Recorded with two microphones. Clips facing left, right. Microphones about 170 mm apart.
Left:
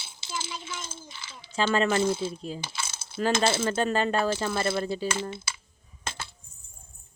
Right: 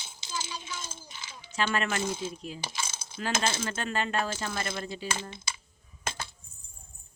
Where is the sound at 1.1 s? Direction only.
15° right (ahead or behind).